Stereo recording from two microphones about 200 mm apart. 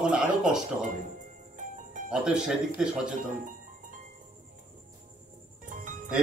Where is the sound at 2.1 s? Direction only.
5° right (ahead or behind).